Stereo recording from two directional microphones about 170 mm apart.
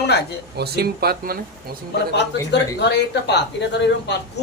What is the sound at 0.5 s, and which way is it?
Speech, 70° right (ahead or behind).